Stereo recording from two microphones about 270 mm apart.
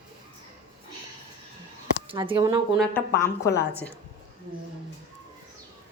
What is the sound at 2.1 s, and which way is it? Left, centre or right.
Speech, centre.